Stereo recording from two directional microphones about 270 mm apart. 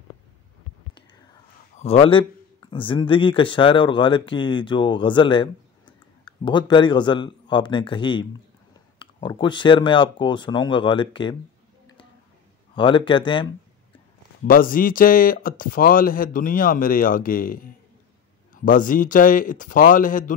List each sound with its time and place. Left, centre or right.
1.8 s a man's voice: left
12.7 s a man's voice: centre
14.4 s a man's voice: left